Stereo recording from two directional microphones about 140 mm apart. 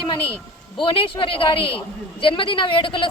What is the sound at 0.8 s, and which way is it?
Speech, 40° left (ahead or behind).